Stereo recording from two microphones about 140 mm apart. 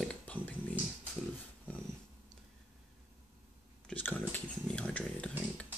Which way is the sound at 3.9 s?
15° left (ahead or behind).